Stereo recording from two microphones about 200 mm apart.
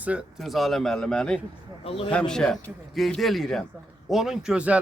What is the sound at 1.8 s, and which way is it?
Speech, 25° left (ahead or behind).